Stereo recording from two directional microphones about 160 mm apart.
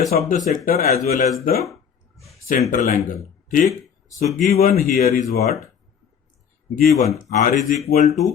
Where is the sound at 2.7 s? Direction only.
55° left (ahead or behind).